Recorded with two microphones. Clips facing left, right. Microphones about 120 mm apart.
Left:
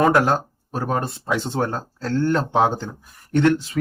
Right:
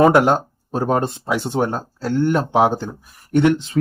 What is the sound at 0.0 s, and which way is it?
Speech, 20° right (ahead or behind).